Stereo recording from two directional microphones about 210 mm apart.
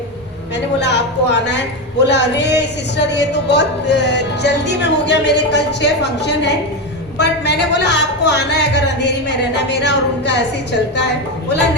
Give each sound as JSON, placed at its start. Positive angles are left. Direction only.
{"t": 0.5, "sound": "a woman's voice", "side_deg": 55}